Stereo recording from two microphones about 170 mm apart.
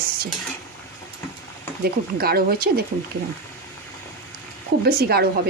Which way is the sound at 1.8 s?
65° right (ahead or behind).